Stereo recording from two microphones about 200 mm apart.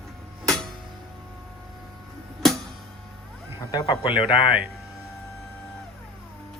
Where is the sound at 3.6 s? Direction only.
20° left (ahead or behind).